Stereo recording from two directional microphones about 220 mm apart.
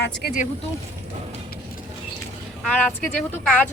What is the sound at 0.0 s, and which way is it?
Speech, 45° left (ahead or behind).